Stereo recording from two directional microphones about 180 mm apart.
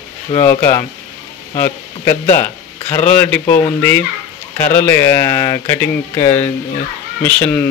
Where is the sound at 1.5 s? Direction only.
15° left (ahead or behind).